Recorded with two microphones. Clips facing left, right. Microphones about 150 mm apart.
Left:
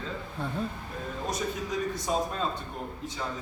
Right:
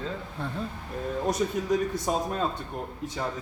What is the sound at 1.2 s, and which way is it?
Speech, 55° right (ahead or behind).